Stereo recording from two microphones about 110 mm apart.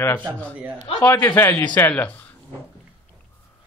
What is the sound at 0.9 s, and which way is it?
Speech, 55° left (ahead or behind).